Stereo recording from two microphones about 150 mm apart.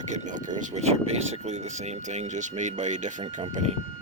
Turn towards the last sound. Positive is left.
turn(degrees=-50)  # may be behind; listen again after turning